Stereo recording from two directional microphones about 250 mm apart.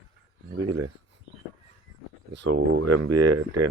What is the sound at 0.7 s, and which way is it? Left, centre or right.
Speech, right.